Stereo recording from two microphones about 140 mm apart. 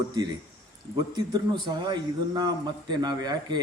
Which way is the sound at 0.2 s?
30° right (ahead or behind).